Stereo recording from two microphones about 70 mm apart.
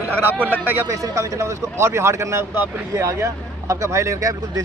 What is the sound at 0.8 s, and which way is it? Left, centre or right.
Speech, right.